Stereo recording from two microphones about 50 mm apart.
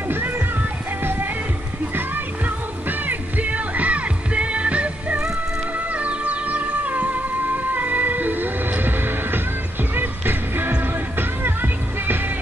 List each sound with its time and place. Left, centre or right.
2.9 s music: right